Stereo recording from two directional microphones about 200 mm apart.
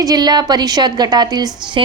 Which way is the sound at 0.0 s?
20° right (ahead or behind).